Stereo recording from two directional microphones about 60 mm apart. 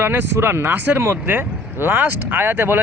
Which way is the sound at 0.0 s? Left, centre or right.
Right.